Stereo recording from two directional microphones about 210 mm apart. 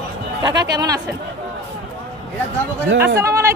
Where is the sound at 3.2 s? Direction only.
15° right (ahead or behind).